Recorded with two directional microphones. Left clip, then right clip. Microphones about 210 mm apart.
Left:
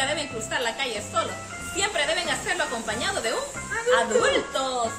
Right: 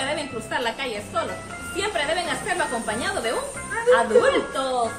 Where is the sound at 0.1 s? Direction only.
25° left (ahead or behind).